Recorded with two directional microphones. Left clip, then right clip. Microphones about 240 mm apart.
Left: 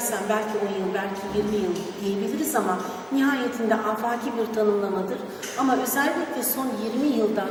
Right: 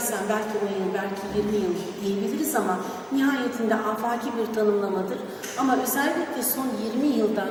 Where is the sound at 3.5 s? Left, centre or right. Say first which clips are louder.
Left 1 dB; centre.